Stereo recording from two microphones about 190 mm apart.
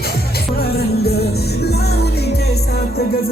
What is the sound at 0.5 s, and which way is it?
Music, 55° left (ahead or behind).